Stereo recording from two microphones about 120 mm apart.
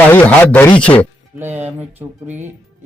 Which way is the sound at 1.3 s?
20° right (ahead or behind).